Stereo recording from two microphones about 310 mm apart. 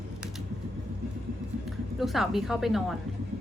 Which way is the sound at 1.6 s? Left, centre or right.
Centre.